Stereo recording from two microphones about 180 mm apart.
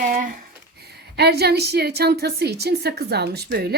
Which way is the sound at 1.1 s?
65° right (ahead or behind).